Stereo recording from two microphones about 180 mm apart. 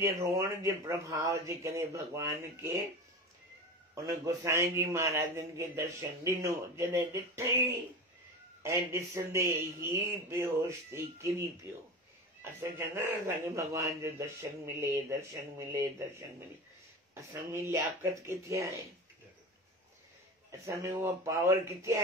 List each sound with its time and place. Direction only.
0.0 s a man's voice: 15° right (ahead or behind)
3.9 s a man's voice: 20° right (ahead or behind)
8.6 s a man's voice: 15° right (ahead or behind)
20.6 s a man's voice: 15° right (ahead or behind)